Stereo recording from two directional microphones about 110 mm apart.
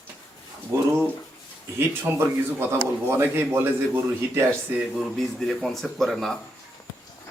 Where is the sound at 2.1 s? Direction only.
20° right (ahead or behind).